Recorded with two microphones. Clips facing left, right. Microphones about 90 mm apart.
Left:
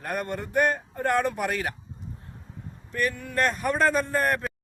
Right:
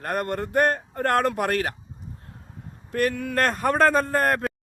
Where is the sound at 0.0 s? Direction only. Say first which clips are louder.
Right 4 dB; 60° right (ahead or behind).